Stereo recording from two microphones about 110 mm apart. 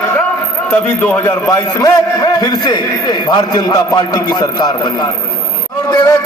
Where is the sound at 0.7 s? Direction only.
20° left (ahead or behind); by 5.0 s 40° left (ahead or behind).